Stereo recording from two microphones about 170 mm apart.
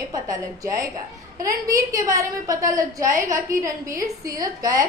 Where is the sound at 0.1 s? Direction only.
20° right (ahead or behind).